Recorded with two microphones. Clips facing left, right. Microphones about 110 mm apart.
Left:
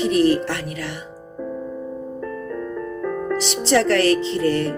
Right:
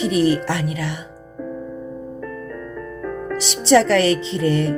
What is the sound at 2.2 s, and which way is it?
Music, 25° left (ahead or behind).